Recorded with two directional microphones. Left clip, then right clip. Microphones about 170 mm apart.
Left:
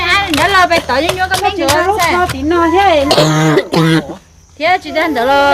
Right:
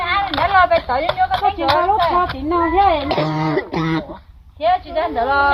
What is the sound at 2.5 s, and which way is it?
Speech, 35° left (ahead or behind).